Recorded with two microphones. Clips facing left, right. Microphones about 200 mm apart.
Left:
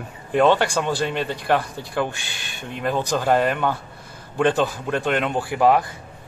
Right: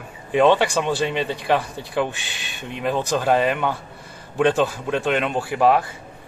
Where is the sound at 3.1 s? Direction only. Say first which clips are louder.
Even; centre (ahead or behind).